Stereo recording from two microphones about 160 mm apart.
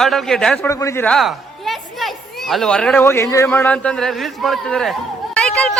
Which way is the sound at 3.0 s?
20° left (ahead or behind).